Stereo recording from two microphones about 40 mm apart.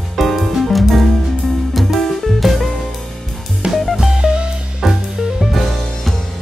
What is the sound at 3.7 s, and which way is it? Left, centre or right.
Music, centre.